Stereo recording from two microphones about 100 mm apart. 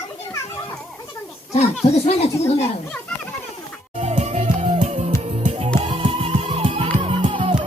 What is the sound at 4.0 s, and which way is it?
Music, 90° right.